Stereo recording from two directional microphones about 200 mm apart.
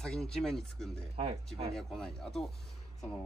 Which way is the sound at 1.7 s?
Centre (ahead or behind).